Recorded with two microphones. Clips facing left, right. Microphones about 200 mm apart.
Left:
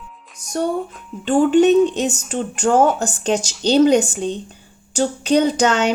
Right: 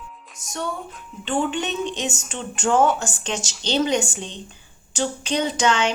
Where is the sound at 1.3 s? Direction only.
45° left (ahead or behind).